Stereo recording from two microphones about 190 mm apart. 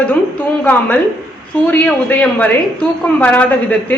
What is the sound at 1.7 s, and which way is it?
A woman's voice, 5° left (ahead or behind).